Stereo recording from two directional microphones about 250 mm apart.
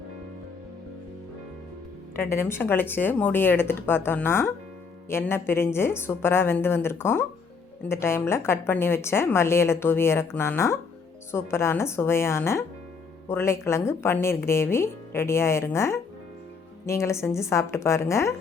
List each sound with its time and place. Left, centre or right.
2.1 s a woman's voice: centre